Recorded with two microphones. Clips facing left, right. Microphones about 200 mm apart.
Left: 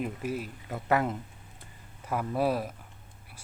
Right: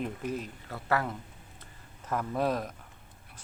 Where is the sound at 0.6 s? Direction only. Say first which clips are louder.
Left 4 dB; 20° left (ahead or behind).